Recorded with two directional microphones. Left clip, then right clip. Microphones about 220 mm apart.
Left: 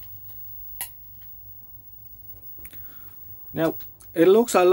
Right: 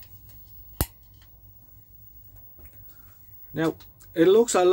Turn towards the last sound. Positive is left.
turn(degrees=15)  # may be behind; listen again after turning